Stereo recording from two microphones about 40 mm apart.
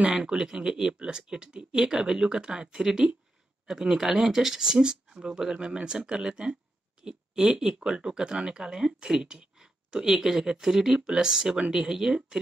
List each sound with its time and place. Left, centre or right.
0.2 s speech: centre